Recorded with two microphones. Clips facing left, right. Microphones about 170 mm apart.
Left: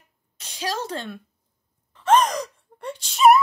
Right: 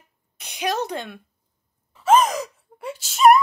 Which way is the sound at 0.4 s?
15° right (ahead or behind).